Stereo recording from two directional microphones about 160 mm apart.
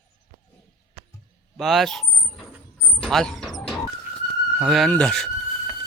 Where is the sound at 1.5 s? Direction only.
Centre (ahead or behind).